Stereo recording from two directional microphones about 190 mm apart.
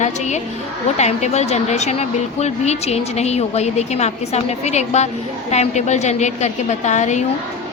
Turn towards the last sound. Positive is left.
turn(degrees=40)  # may be behind; listen again after turning